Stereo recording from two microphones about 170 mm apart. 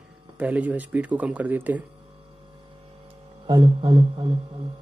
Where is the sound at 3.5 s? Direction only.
30° right (ahead or behind).